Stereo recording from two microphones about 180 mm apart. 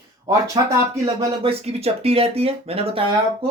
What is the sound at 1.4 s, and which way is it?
Speech, 35° right (ahead or behind).